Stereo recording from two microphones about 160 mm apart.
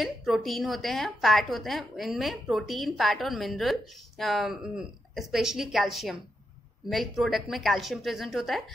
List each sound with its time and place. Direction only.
0.0 s a woman's voice: centre (ahead or behind)